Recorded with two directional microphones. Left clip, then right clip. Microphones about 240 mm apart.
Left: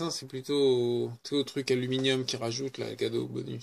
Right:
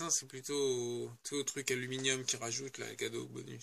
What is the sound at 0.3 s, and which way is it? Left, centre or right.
Speech, centre.